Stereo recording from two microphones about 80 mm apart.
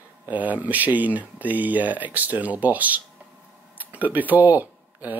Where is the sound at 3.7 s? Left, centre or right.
Right.